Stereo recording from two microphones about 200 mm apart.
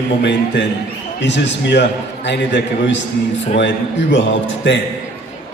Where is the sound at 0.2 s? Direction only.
60° left (ahead or behind).